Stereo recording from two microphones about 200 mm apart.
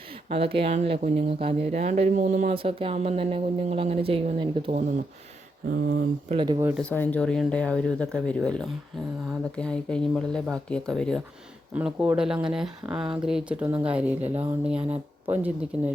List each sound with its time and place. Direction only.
0.3 s speech: 30° right (ahead or behind)
5.6 s speech: 50° right (ahead or behind)
6.2 s speech: 25° right (ahead or behind)
6.7 s speech: 10° left (ahead or behind); by 15.5 s 10° right (ahead or behind)